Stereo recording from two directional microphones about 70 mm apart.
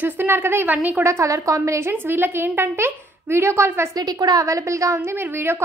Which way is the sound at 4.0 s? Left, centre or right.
Right.